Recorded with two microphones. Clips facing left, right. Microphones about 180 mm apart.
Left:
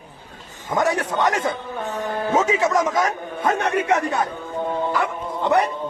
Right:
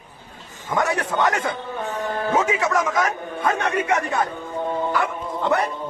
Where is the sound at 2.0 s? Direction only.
15° left (ahead or behind).